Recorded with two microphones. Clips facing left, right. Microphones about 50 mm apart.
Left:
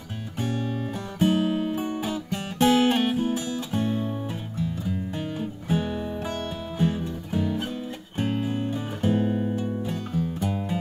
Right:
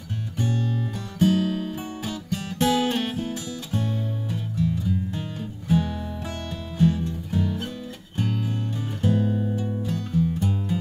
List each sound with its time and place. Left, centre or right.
0.4 s music: left